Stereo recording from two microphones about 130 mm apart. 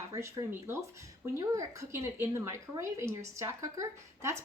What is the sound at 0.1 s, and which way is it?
Speech, 25° right (ahead or behind).